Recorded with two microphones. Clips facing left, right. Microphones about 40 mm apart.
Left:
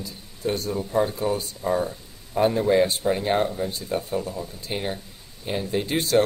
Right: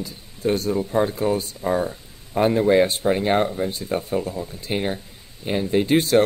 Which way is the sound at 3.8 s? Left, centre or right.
Right.